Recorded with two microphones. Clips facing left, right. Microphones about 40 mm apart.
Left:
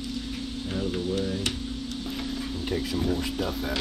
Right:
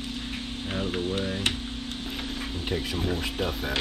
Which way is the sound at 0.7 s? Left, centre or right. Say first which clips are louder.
Even; right.